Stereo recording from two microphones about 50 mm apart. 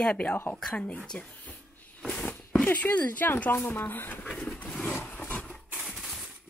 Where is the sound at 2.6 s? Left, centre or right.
Left.